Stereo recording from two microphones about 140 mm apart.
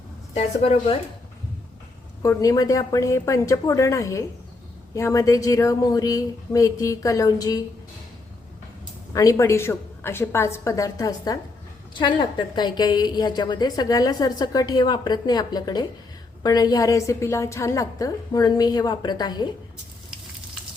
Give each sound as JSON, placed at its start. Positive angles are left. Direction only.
{"t": 0.3, "sound": "a woman's voice", "side_deg": 45}
{"t": 2.2, "sound": "a woman's voice", "side_deg": 25}
{"t": 9.1, "sound": "a woman's voice", "side_deg": 20}